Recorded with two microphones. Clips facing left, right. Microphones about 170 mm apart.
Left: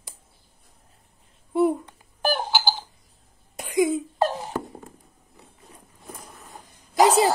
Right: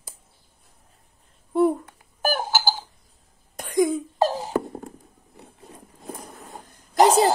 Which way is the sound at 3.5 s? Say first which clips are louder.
Right 1 dB; 5° left (ahead or behind).